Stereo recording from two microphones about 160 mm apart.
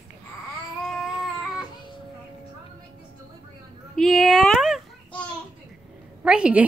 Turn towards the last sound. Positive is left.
turn(degrees=-5)  # may be behind; listen again after turning